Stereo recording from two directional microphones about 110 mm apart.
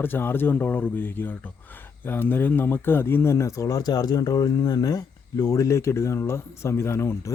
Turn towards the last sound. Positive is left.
turn(degrees=25)  # may be behind; listen again after turning